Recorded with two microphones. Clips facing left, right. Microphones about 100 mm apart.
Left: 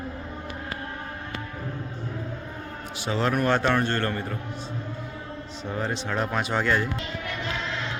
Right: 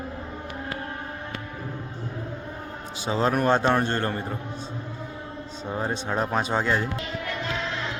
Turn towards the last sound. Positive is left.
turn(degrees=-20)  # may be behind; listen again after turning